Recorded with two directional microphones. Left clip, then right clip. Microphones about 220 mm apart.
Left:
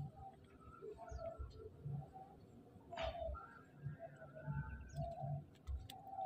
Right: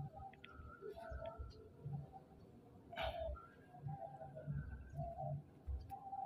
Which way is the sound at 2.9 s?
5° right (ahead or behind).